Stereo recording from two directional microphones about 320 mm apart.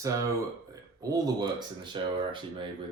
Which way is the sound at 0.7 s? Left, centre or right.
Centre.